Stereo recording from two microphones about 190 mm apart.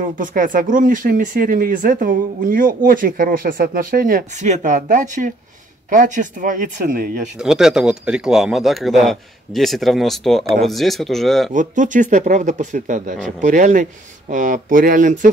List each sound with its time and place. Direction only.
0.0 s speech: 45° right (ahead or behind)
7.3 s speech: 5° right (ahead or behind)
11.5 s speech: 40° right (ahead or behind)